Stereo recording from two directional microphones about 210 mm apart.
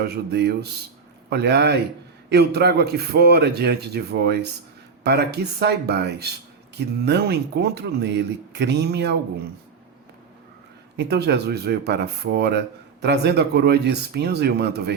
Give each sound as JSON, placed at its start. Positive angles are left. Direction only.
{"t": 0.0, "sound": "speech", "side_deg": -50}
{"t": 10.9, "sound": "speech", "side_deg": -50}